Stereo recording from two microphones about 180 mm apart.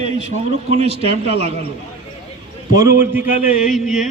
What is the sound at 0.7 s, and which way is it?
Speech, 35° right (ahead or behind).